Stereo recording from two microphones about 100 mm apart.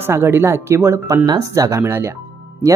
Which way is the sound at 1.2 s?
35° right (ahead or behind).